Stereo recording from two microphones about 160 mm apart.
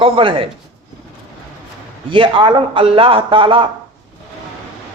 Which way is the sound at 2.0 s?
30° right (ahead or behind).